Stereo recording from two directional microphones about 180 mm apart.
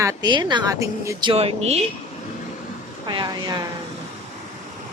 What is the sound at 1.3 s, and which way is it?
Speech, 35° right (ahead or behind).